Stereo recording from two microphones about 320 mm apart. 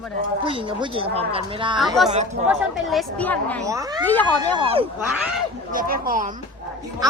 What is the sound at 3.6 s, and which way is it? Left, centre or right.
Speech, centre.